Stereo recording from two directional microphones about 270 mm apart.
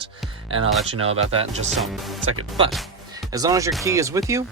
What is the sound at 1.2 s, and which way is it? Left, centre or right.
Speech, right.